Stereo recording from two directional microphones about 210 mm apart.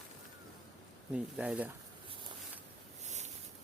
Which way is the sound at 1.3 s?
5° right (ahead or behind).